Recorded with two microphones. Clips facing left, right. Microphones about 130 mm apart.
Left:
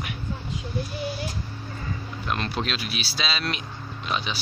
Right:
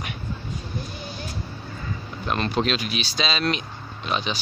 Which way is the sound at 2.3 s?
Centre (ahead or behind).